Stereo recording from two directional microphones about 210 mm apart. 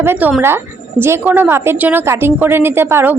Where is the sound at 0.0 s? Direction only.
10° right (ahead or behind).